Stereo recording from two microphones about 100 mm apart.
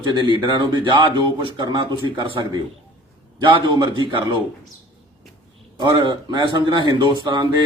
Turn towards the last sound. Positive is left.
turn(degrees=-50)  # may be behind; listen again after turning